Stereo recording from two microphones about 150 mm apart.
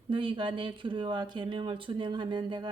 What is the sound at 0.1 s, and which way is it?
Speech, 35° right (ahead or behind).